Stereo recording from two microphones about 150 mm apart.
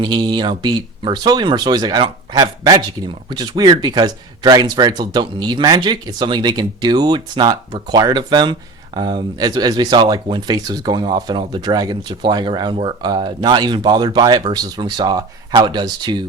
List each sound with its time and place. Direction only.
0.0 s speech: 30° right (ahead or behind)